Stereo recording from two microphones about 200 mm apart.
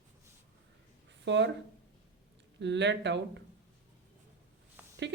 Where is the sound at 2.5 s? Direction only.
60° right (ahead or behind).